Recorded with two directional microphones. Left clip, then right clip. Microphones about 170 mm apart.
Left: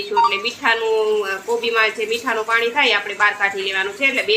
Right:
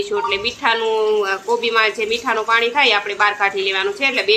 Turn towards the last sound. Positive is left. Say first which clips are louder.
# right 1 dB
turn(degrees=-30)  # may be behind; listen again after turning